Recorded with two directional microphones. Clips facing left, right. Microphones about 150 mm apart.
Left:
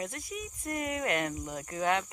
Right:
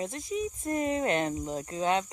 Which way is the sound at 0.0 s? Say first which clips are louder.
Right 6 dB; 25° right (ahead or behind).